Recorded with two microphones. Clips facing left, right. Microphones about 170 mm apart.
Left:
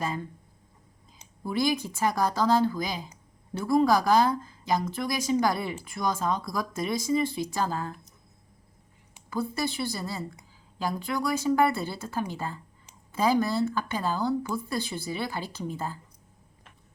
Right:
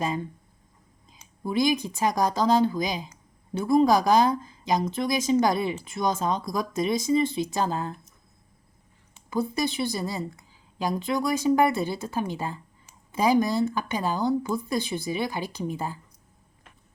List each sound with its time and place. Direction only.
0.0 s speech: 20° right (ahead or behind)
9.3 s speech: 20° right (ahead or behind)